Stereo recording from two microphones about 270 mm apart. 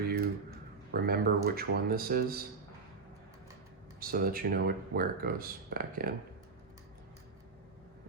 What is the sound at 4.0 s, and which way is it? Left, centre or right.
Speech, right.